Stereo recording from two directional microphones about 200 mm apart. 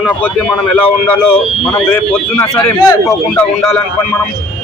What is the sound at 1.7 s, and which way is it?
A man's voice, 10° left (ahead or behind).